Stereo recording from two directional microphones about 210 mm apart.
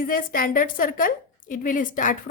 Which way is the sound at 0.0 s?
40° left (ahead or behind).